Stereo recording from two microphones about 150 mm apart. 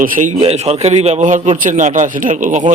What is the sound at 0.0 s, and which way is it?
A man's voice, 60° right (ahead or behind).